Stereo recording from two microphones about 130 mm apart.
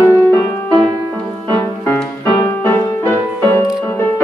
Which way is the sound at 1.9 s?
10° left (ahead or behind).